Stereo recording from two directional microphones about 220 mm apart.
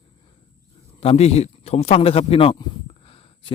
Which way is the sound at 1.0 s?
30° left (ahead or behind).